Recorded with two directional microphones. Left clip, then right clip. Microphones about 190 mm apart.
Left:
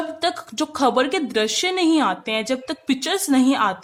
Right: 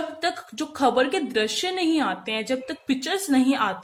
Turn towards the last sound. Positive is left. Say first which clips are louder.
# left 4 dB
turn(degrees=30)  # may be behind; listen again after turning